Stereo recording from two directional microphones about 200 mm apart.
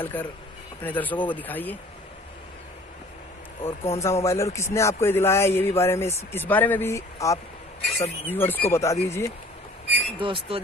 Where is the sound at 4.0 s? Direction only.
15° left (ahead or behind).